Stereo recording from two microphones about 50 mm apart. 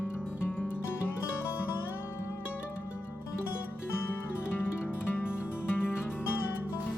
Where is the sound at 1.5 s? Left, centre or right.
Left.